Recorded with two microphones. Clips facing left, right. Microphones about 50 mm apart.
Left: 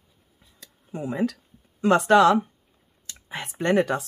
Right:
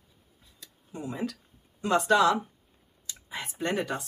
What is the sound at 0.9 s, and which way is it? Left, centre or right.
Speech, left.